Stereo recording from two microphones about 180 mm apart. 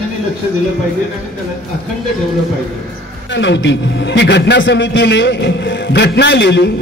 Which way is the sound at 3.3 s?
80° left.